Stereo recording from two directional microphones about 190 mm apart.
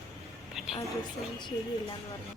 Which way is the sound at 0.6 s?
Centre (ahead or behind).